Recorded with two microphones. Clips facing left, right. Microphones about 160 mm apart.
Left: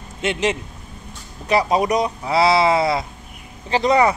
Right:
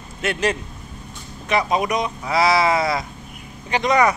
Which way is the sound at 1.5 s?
30° left (ahead or behind).